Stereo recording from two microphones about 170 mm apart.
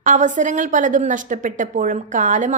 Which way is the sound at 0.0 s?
50° right (ahead or behind).